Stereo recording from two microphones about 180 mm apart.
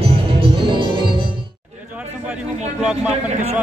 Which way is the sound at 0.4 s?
30° right (ahead or behind).